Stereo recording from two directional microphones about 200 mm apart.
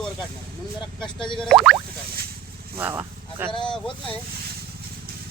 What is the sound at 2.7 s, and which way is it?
Speech, 10° right (ahead or behind).